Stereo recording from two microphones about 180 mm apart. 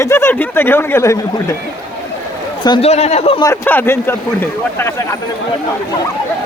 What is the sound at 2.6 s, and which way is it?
Speech, 25° left (ahead or behind).